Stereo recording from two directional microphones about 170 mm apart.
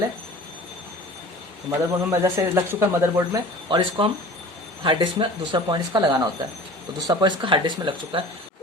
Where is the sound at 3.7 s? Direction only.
30° right (ahead or behind).